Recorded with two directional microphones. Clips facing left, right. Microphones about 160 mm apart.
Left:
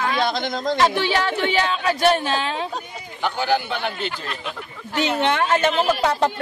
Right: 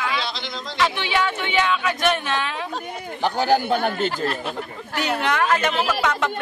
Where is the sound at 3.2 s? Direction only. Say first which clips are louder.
Right 3 dB; 40° right (ahead or behind).